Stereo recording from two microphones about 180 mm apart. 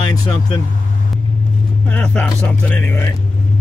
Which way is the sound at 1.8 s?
5° left (ahead or behind).